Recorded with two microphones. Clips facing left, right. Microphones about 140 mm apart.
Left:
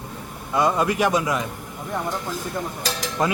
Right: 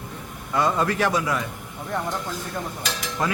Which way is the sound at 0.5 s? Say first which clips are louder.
Left 2 dB; 15° left (ahead or behind).